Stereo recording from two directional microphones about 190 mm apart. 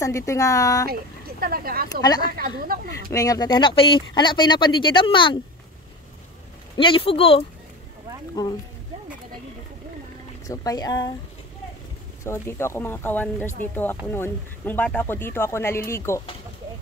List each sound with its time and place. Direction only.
0.0 s speech: 15° left (ahead or behind)
1.4 s speech: 50° right (ahead or behind)
3.1 s speech: 20° left (ahead or behind)
6.8 s speech: 25° left (ahead or behind)
10.4 s speech: 15° left (ahead or behind)
12.3 s speech: 15° left (ahead or behind)